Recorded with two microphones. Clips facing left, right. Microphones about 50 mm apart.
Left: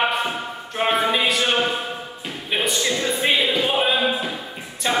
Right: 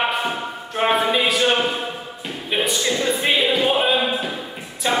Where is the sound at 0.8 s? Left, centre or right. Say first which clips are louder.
Right 1 dB; centre.